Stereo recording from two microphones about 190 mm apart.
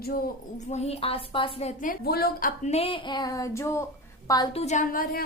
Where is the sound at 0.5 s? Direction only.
35° left (ahead or behind).